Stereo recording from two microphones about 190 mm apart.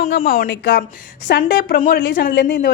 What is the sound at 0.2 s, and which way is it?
Speech, 50° left (ahead or behind).